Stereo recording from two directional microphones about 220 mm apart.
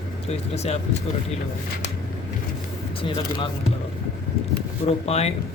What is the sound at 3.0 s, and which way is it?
Speech, 25° left (ahead or behind).